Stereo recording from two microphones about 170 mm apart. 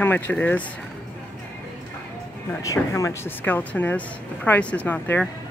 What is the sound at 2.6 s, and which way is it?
Speech, 20° left (ahead or behind).